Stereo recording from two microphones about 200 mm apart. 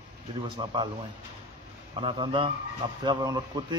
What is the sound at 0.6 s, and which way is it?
Speech, 25° right (ahead or behind).